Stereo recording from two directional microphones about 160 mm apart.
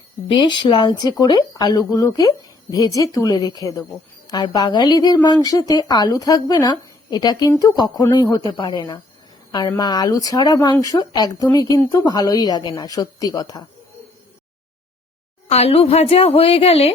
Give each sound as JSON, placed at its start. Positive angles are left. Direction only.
{"t": 0.3, "sound": "a woman's voice", "side_deg": 30}
{"t": 15.4, "sound": "a woman's voice", "side_deg": 40}